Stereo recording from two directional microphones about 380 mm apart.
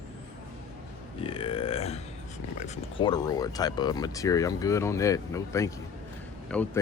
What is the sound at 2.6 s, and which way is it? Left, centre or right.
Speech, centre.